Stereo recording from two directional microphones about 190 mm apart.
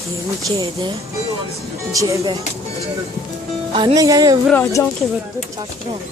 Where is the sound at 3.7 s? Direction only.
20° right (ahead or behind).